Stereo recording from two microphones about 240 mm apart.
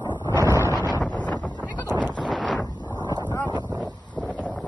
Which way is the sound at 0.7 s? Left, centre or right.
Centre.